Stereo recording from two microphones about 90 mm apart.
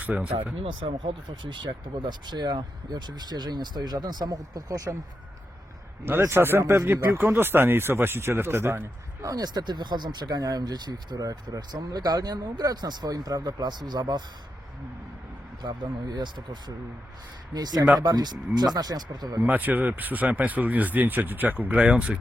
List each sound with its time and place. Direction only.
0.0 s speech: 15° right (ahead or behind)
0.6 s speech: 80° right; by 4.9 s 40° right (ahead or behind)
6.1 s speech: 25° right (ahead or behind)
9.3 s speech: 50° right (ahead or behind)
15.6 s speech: 50° right (ahead or behind)
19.5 s speech: 20° right (ahead or behind)